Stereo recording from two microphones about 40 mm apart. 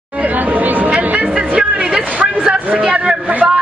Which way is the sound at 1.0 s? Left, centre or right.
Right.